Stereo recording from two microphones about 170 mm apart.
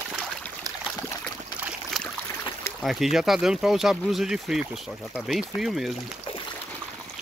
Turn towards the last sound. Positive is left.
turn(degrees=0)  # may be behind; listen again after turning